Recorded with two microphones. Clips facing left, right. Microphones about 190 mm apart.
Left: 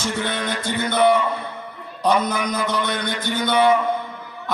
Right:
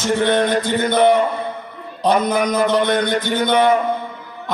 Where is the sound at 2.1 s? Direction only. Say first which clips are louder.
Right 4 dB; 55° right (ahead or behind).